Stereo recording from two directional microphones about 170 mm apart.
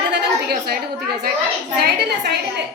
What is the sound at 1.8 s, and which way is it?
Speech, 70° right (ahead or behind).